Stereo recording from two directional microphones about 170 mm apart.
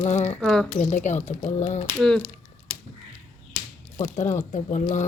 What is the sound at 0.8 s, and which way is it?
Speech, 45° left (ahead or behind).